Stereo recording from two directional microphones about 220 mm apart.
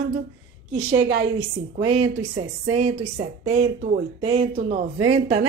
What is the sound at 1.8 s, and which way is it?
A woman's voice, 30° right (ahead or behind).